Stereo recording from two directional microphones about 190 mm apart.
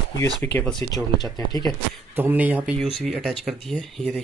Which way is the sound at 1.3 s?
20° left (ahead or behind).